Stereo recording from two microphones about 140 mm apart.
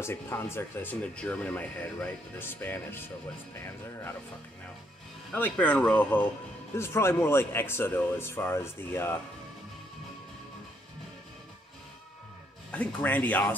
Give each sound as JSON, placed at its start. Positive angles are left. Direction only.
{"t": 0.0, "sound": "speech", "side_deg": 20}
{"t": 5.3, "sound": "speech", "side_deg": 10}
{"t": 12.7, "sound": "speech", "side_deg": 10}